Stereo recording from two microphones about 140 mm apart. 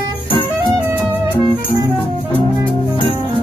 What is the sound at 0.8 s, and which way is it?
Music, 15° right (ahead or behind).